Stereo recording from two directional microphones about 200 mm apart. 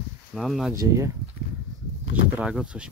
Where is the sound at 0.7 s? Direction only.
15° right (ahead or behind).